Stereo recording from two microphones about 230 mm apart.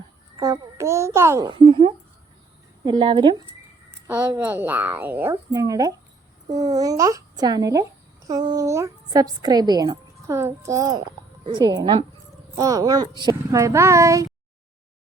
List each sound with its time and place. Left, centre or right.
0.3 s a child's voice: centre
4.0 s a child's voice: centre